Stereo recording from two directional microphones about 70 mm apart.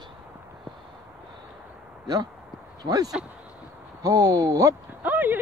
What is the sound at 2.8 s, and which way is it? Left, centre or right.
Speech, right.